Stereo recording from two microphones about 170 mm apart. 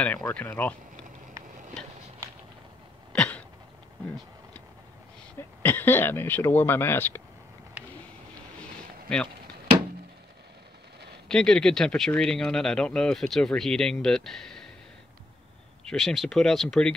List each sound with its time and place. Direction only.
0.0 s speech: 10° left (ahead or behind)
3.1 s cough: 5° left (ahead or behind)
5.6 s speech: 10° left (ahead or behind)
11.2 s speech: 5° left (ahead or behind)
15.8 s speech: 5° left (ahead or behind)